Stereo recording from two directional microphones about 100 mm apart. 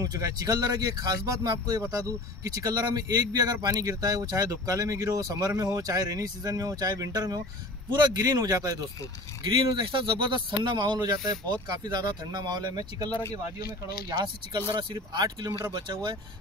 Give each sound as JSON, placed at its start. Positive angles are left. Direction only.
{"t": 0.0, "sound": "speech", "side_deg": -40}
{"t": 9.4, "sound": "speech", "side_deg": -50}